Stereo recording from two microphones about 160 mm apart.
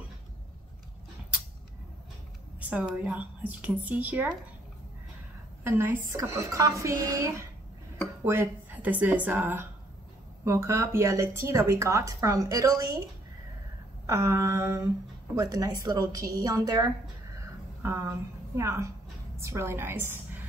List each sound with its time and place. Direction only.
2.7 s a woman's voice: 10° right (ahead or behind)
5.6 s a woman's voice: 15° right (ahead or behind)
14.0 s a woman's voice: 20° right (ahead or behind)